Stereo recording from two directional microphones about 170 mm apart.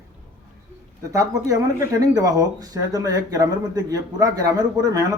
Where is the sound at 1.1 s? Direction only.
20° right (ahead or behind).